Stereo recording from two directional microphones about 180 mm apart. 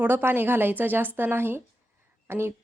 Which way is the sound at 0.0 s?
10° right (ahead or behind).